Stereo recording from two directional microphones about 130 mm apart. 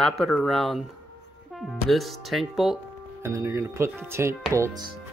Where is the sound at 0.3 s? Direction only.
5° left (ahead or behind).